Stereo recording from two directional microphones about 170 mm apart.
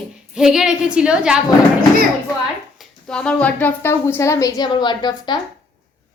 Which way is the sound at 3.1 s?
5° left (ahead or behind).